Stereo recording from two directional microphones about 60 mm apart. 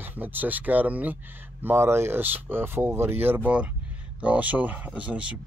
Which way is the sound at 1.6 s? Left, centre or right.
Right.